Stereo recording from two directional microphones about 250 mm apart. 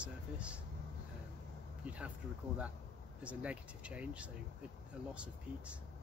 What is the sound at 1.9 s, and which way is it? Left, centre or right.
Speech, centre.